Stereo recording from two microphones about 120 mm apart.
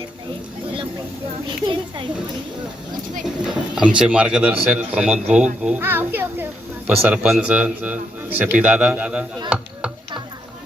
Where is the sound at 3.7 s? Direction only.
5° right (ahead or behind).